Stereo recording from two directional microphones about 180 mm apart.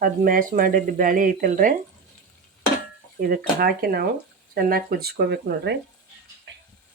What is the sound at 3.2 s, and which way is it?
Speech, 55° right (ahead or behind).